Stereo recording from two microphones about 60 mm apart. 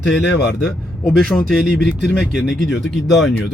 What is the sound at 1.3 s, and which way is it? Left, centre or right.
Speech, left.